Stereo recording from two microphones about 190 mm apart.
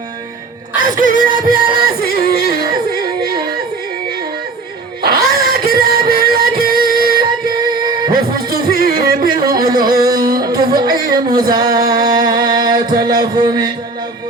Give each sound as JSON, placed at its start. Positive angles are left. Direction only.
{"t": 0.8, "sound": "music", "side_deg": -45}
{"t": 5.0, "sound": "music", "side_deg": -50}
{"t": 8.4, "sound": "music", "side_deg": -50}
{"t": 9.3, "sound": "music", "side_deg": -20}
{"t": 11.1, "sound": "female singing", "side_deg": -20}
{"t": 12.8, "sound": "music", "side_deg": -20}